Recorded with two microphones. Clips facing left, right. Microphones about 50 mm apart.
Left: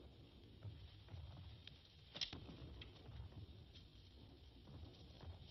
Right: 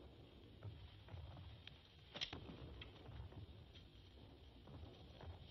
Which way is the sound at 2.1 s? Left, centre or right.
Centre.